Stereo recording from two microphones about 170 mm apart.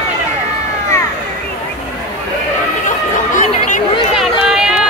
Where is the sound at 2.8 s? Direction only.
50° left (ahead or behind).